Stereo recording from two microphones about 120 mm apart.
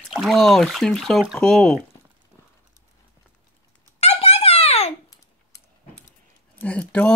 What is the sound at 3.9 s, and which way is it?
Giggle, 60° left (ahead or behind).